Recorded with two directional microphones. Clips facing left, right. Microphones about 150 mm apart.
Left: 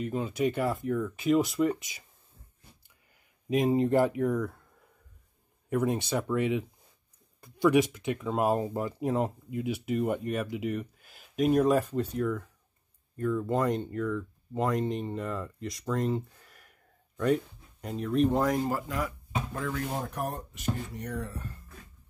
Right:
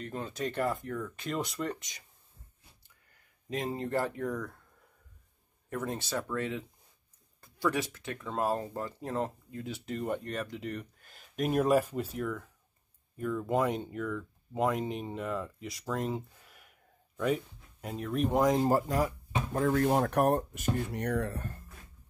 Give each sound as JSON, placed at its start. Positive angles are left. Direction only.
{"t": 0.0, "sound": "speech", "side_deg": 10}
{"t": 3.4, "sound": "speech", "side_deg": 15}
{"t": 5.7, "sound": "speech", "side_deg": 15}
{"t": 18.6, "sound": "speech", "side_deg": -40}
{"t": 19.9, "sound": "speech", "side_deg": -65}